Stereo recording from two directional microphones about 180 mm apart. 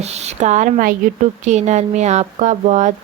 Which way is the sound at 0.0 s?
35° right (ahead or behind).